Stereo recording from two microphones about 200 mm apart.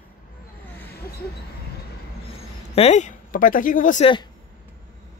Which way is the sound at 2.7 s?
30° left (ahead or behind).